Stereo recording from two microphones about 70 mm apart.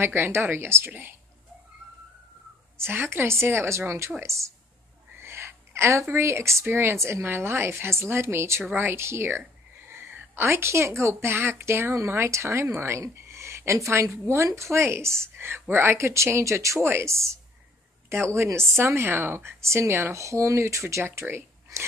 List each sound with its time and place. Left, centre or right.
0.0 s a woman's voice: right
2.8 s a woman's voice: right
5.2 s a sound: right
6.6 s a woman's voice: right